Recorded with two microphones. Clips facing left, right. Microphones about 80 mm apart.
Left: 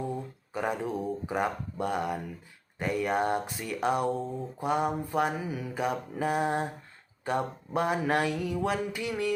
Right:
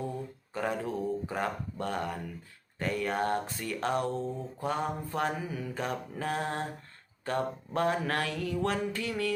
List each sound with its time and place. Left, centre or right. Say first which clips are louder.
0.5 s speech: left 2 dB; centre